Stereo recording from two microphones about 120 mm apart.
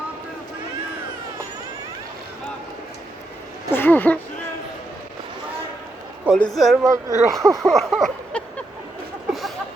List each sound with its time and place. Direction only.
3.7 s speech: 15° left (ahead or behind)
6.3 s speech: centre (ahead or behind)
6.8 s speech: 25° right (ahead or behind)
7.7 s a sound: centre (ahead or behind)